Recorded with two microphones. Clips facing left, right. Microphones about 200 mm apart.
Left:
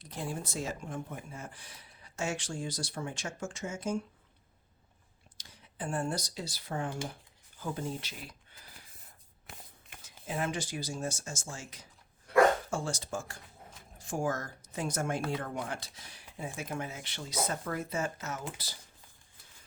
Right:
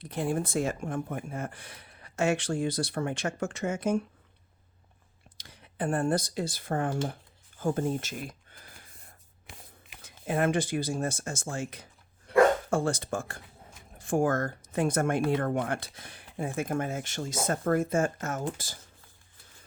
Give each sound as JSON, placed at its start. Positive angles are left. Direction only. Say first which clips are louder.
{"t": 0.0, "sound": "speech", "louder": "right 8 dB", "side_deg": -60}
{"t": 5.4, "sound": "speech", "louder": "right 8 dB", "side_deg": -60}
{"t": 10.0, "sound": "speech", "louder": "right 8 dB", "side_deg": -60}